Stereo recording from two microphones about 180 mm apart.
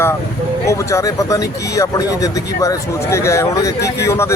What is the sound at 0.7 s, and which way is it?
Speech, 15° left (ahead or behind).